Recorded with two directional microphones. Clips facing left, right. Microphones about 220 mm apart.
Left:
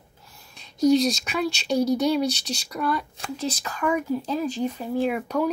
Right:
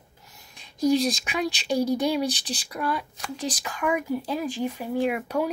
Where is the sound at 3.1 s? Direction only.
30° left (ahead or behind).